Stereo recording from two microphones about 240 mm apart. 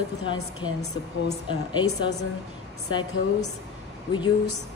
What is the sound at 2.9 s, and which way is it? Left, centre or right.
Speech, centre.